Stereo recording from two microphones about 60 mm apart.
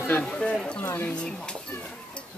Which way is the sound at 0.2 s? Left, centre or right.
Centre.